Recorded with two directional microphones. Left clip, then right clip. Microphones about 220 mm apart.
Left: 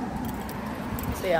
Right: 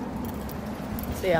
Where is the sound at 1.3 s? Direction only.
15° right (ahead or behind).